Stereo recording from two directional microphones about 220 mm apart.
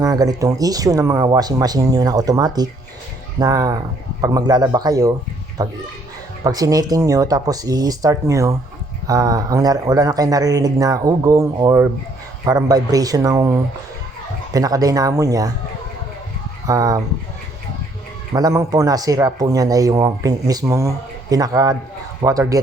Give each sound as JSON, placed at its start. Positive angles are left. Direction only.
{"t": 0.0, "sound": "speech", "side_deg": -15}
{"t": 14.5, "sound": "speech", "side_deg": -15}
{"t": 16.6, "sound": "speech", "side_deg": -15}
{"t": 18.3, "sound": "speech", "side_deg": -15}